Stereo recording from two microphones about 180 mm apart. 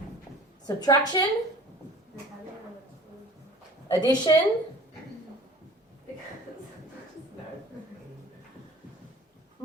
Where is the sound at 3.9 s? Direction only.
25° left (ahead or behind).